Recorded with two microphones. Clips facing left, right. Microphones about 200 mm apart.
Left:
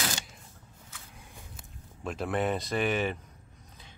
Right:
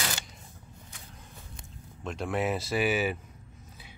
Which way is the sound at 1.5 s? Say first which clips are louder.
Right 2 dB; 5° left (ahead or behind).